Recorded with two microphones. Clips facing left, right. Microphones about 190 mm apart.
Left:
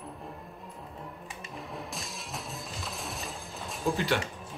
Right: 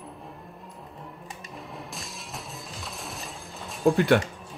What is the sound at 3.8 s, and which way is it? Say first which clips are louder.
Speech: right 9 dB; 55° right (ahead or behind).